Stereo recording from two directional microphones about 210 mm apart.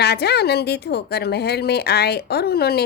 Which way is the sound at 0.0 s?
50° left (ahead or behind).